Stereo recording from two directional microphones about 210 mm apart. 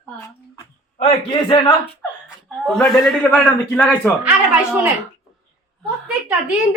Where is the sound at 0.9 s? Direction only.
30° left (ahead or behind).